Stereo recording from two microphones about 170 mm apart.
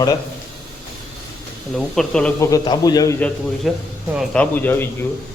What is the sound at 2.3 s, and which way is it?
Speech, 20° left (ahead or behind).